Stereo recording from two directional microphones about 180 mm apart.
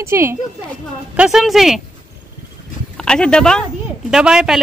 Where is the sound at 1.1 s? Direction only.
5° right (ahead or behind).